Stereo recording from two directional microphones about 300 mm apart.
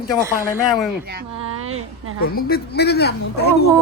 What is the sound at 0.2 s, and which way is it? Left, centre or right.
Speech, centre.